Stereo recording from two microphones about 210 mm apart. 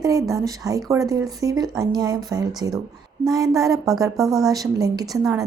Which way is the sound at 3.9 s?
15° right (ahead or behind).